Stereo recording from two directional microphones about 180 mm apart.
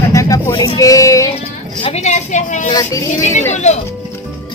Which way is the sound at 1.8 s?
40° left (ahead or behind).